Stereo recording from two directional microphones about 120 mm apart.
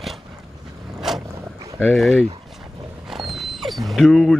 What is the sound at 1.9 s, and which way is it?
Speech, 5° right (ahead or behind).